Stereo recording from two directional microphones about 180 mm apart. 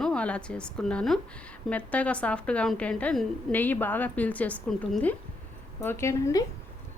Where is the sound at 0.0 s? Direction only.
5° left (ahead or behind).